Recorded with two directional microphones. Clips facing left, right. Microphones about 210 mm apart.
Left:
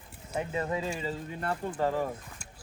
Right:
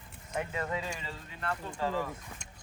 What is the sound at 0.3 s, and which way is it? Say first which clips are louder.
Speech: left 3 dB; 25° left (ahead or behind).